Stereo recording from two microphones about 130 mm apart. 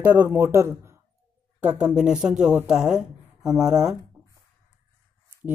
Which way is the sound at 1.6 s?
5° right (ahead or behind).